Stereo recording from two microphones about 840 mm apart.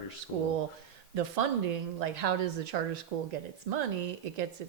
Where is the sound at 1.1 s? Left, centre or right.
Right.